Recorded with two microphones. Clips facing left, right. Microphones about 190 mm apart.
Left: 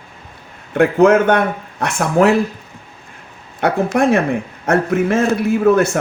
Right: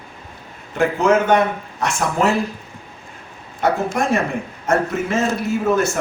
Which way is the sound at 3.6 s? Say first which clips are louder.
Left 4 dB; 65° left (ahead or behind).